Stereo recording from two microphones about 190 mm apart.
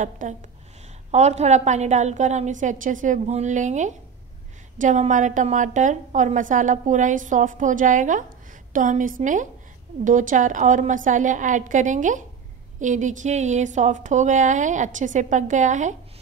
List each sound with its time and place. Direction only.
0.0 s a woman's voice: 40° right (ahead or behind)